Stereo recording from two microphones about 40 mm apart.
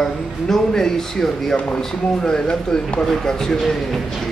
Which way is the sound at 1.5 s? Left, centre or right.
Left.